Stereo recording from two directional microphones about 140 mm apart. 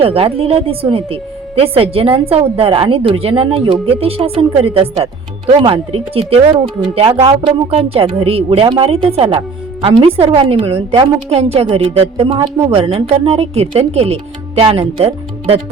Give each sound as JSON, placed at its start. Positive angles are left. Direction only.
{"t": 0.0, "sound": "a woman's voice", "side_deg": -40}